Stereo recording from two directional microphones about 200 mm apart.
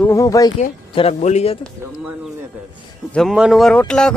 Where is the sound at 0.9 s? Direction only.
30° left (ahead or behind).